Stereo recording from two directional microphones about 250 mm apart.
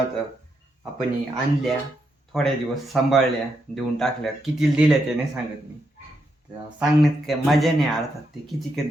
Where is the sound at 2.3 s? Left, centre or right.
Centre.